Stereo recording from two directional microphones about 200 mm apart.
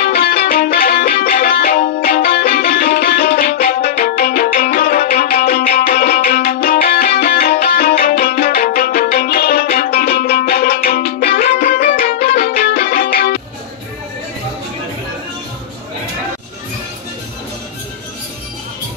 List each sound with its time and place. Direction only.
0.0 s music: 50° left (ahead or behind)